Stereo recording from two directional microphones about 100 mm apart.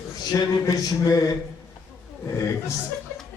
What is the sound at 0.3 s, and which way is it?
Speech, 40° left (ahead or behind).